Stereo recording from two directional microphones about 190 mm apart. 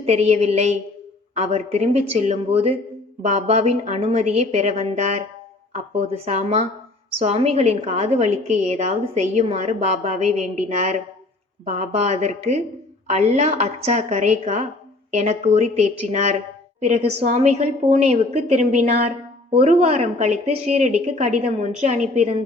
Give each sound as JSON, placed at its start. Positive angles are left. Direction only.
{"t": 0.0, "sound": "a woman's voice", "side_deg": -35}